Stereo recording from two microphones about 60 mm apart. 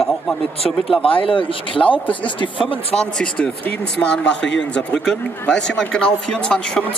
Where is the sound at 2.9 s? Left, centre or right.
Centre.